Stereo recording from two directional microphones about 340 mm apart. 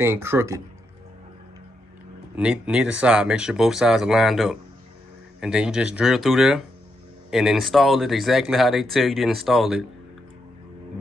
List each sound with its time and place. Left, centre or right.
0.0 s speech: centre
2.3 s speech: centre